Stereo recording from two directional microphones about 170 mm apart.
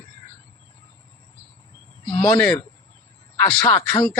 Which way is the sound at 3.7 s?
25° left (ahead or behind).